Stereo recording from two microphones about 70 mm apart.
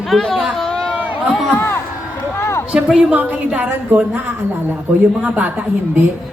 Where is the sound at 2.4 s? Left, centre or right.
Left.